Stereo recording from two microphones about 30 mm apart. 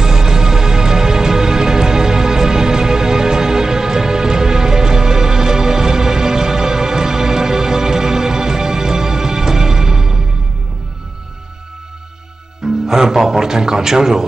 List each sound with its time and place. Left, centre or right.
0.0 s music: centre
12.6 s music: centre